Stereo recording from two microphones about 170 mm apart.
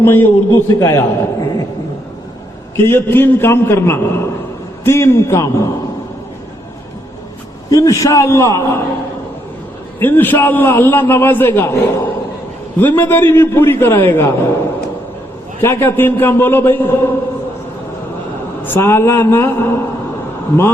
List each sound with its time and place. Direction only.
0.0 s a man's voice: 15° left (ahead or behind)
2.7 s a man's voice: 15° left (ahead or behind)
7.7 s a man's voice: 20° left (ahead or behind)
10.0 s a man's voice: 10° left (ahead or behind)
18.6 s a man's voice: 15° left (ahead or behind)